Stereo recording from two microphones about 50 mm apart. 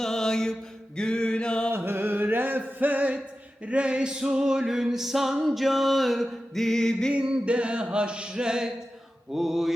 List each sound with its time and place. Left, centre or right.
0.0 s mantra: centre
0.9 s a sound: centre
1.7 s music: right
3.7 s music: right; by 7.1 s centre
7.1 s a sound: right
9.3 s music: centre